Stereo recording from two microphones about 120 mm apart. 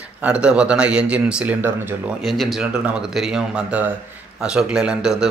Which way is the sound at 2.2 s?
Centre (ahead or behind).